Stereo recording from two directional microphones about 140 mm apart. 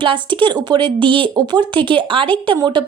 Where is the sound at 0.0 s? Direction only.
35° right (ahead or behind).